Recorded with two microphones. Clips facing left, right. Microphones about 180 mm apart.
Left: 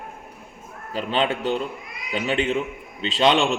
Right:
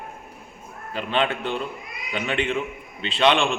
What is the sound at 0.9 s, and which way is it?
A man's voice, 35° left (ahead or behind).